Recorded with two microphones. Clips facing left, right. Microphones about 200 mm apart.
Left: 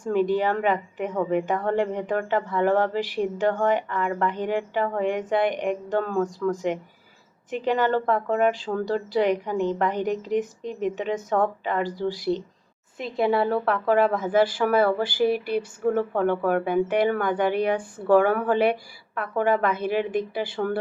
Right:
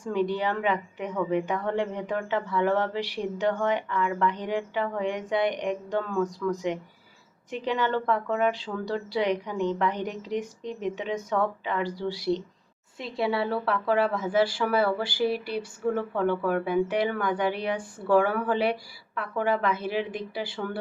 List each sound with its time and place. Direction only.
0.0 s speech: 50° left (ahead or behind)